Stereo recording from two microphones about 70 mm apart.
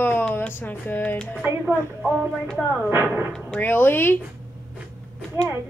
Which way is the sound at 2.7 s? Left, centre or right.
Right.